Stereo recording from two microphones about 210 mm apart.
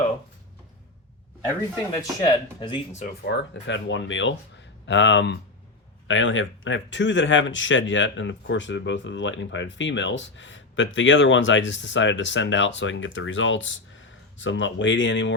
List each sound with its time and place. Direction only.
1.9 s speech: 20° left (ahead or behind)
3.2 s speech: 55° left (ahead or behind)